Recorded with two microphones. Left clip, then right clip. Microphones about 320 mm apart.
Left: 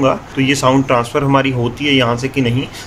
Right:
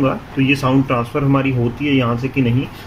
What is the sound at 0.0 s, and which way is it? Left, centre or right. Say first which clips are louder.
Speech: left 4 dB; left.